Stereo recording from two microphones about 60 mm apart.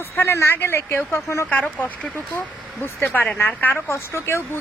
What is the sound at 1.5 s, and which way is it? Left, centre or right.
Speech, left.